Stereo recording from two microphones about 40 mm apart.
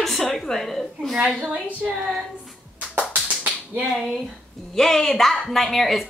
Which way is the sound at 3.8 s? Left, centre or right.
Centre.